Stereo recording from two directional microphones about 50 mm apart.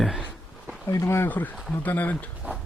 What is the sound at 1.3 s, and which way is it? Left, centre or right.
Speech, left.